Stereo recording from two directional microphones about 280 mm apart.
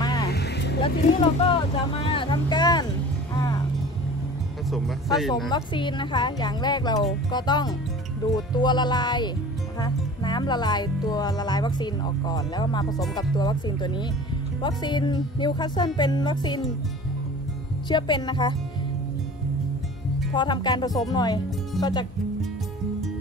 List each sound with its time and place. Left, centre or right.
0.0 s vehicle: centre
0.3 s vehicle: left
0.7 s speech: centre
3.3 s music: centre
4.6 s speech: centre
5.5 s speech: centre
17.8 s speech: centre
20.3 s speech: centre